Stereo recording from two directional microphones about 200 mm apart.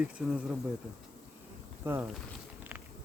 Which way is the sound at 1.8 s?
10° right (ahead or behind).